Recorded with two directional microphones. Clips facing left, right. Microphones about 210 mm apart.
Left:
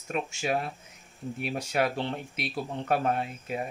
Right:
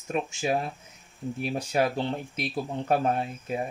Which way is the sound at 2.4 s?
30° right (ahead or behind).